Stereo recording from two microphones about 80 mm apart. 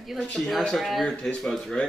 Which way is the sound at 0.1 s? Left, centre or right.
Centre.